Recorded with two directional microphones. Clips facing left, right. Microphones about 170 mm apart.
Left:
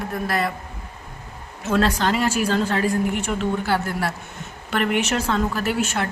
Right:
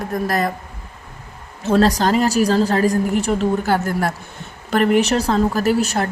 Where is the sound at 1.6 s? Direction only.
35° right (ahead or behind).